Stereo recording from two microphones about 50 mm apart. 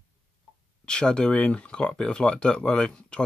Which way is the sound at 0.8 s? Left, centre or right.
Centre.